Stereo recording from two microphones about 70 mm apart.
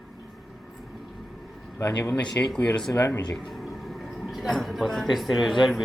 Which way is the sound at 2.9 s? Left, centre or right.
Left.